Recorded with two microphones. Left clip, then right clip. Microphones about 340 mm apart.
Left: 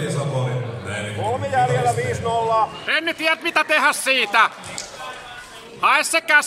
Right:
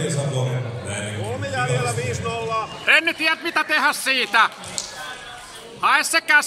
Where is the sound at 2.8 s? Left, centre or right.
Centre.